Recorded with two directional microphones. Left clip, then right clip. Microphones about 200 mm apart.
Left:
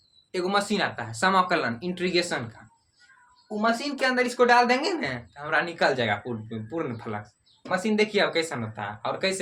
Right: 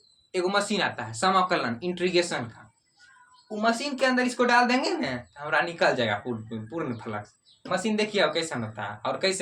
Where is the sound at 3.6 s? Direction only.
15° left (ahead or behind).